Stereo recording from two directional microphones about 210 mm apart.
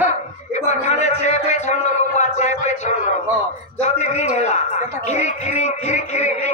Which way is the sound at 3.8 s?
30° left (ahead or behind).